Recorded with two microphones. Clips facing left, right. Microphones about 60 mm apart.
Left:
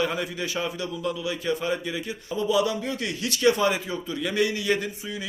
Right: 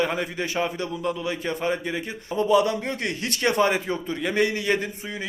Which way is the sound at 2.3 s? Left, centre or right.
Right.